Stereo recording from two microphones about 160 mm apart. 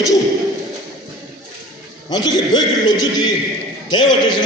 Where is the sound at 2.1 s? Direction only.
25° left (ahead or behind).